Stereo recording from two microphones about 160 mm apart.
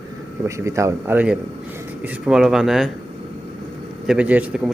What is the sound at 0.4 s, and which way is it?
Speech, 20° right (ahead or behind).